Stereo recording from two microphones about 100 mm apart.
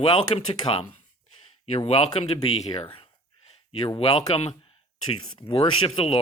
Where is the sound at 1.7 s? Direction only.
90° left.